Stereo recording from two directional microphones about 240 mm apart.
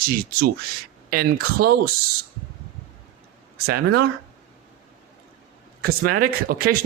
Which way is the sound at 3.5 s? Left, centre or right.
Right.